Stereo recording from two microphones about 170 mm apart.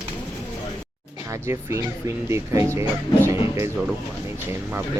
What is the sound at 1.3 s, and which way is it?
Speech, 15° right (ahead or behind).